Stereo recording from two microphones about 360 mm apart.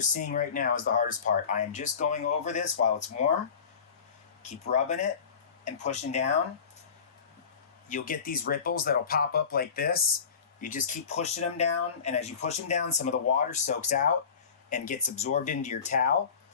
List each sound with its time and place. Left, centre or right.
0.0 s speech: left
4.4 s speech: centre
7.9 s speech: left